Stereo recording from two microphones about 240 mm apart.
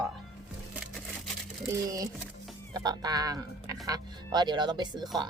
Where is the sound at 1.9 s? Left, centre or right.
Centre.